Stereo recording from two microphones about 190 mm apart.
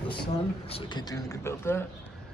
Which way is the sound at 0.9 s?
15° left (ahead or behind).